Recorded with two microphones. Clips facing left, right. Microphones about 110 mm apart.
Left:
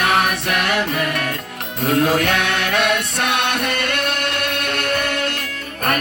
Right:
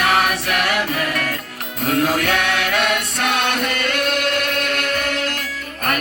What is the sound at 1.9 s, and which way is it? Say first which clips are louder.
Music: left 2 dB; 25° left (ahead or behind).